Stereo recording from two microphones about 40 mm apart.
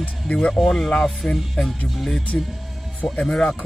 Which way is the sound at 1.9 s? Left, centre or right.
Centre.